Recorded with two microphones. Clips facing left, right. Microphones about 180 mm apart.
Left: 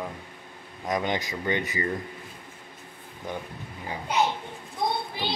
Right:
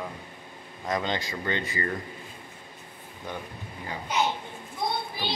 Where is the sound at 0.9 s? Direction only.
15° left (ahead or behind).